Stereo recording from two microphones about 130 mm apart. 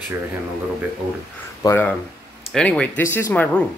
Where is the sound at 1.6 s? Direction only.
20° left (ahead or behind).